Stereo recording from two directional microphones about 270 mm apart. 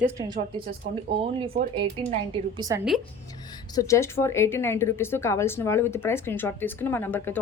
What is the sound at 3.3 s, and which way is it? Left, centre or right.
A woman's voice, centre.